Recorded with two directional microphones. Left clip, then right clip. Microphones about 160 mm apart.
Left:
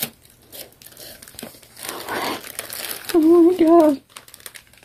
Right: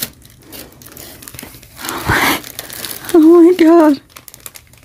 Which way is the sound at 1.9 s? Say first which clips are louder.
Right 12 dB; 60° right (ahead or behind).